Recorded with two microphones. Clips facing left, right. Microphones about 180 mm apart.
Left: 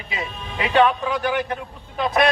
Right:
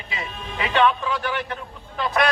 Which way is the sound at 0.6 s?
15° left (ahead or behind).